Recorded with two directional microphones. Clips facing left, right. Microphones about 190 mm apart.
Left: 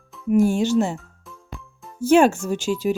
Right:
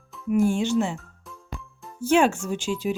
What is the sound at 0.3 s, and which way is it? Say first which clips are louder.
Speech: left 4 dB; 40° left (ahead or behind).